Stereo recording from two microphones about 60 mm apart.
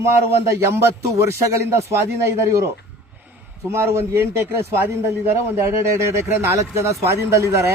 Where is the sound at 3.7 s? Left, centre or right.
Right.